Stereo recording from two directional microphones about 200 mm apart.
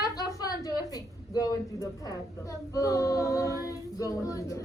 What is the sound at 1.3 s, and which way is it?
Child singing, 15° left (ahead or behind).